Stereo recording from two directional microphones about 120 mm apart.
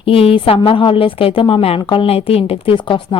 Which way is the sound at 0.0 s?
50° left (ahead or behind).